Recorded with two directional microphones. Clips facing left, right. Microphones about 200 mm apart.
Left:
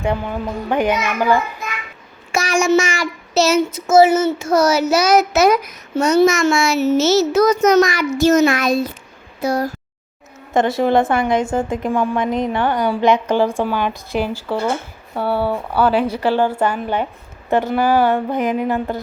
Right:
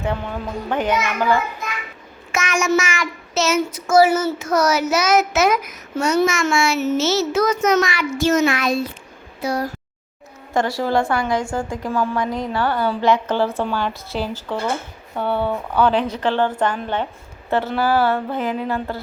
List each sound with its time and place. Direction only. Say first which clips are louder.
0.0 s speech: left 4 dB; 10° left (ahead or behind)
2.3 s child singing: left 4 dB; 35° left (ahead or behind)
9.4 s speech: left 4 dB; 45° left (ahead or behind)
10.5 s a woman's voice: left 4 dB; 20° left (ahead or behind)